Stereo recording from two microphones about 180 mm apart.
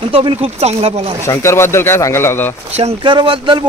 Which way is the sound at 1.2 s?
15° left (ahead or behind).